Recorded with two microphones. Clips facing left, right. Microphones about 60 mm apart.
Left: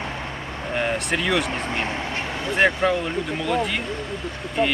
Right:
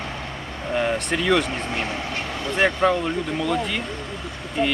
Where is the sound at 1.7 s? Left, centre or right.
Left.